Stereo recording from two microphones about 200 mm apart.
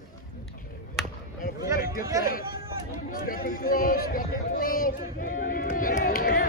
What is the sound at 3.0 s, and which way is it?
A man's voice, 45° left (ahead or behind).